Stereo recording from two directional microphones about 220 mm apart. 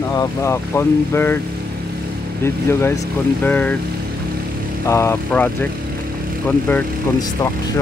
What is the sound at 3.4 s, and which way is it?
Speech, 5° left (ahead or behind).